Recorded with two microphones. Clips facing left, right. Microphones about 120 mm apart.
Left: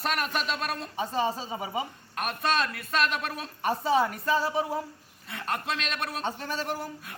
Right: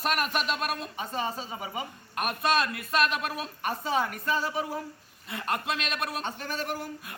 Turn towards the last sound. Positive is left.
turn(degrees=30)  # may be behind; listen again after turning